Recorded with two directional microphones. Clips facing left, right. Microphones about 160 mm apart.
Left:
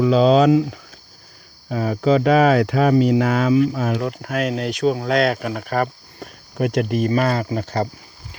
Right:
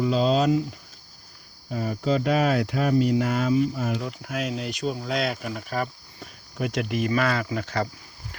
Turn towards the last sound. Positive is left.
turn(degrees=40)  # may be behind; listen again after turning